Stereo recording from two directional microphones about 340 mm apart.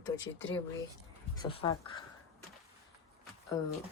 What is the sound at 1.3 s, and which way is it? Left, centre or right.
Speech, centre.